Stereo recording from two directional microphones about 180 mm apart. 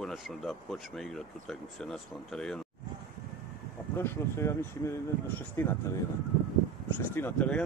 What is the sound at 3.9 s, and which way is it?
Speech, 15° left (ahead or behind).